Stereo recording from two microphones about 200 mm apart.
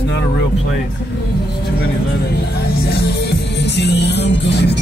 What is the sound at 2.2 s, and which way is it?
Music, 55° left (ahead or behind).